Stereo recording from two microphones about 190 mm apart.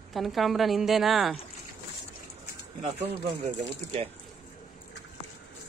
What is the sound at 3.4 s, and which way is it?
Speech, 30° right (ahead or behind).